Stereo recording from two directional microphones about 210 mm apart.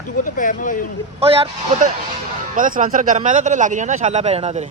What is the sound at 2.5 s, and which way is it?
A man's voice, 40° right (ahead or behind).